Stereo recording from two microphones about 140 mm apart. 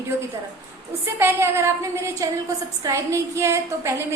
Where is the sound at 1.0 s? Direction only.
15° right (ahead or behind).